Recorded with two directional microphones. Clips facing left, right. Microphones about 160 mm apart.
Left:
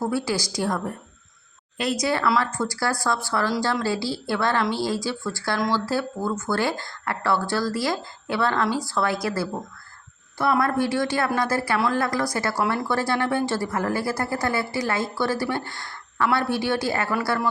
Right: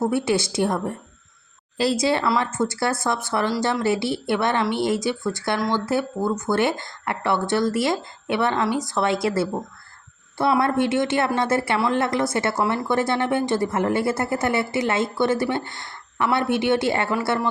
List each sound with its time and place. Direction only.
0.0 s speech: 20° right (ahead or behind)
10.6 s speech: 25° right (ahead or behind)